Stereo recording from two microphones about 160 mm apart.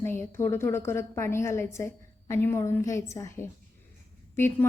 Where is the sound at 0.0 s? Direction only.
15° left (ahead or behind).